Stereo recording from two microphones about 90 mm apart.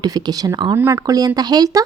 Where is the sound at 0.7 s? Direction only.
35° right (ahead or behind).